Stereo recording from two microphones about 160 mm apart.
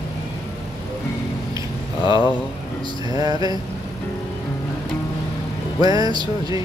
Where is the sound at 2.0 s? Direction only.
30° left (ahead or behind).